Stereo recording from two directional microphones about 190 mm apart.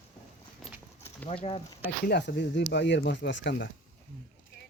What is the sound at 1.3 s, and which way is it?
Speech, 30° left (ahead or behind).